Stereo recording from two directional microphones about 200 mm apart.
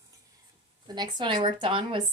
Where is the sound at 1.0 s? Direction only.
25° right (ahead or behind).